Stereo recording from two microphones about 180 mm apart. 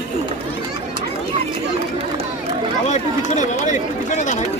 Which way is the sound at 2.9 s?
40° left (ahead or behind).